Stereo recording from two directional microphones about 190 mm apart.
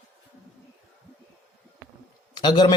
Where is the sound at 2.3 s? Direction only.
20° left (ahead or behind).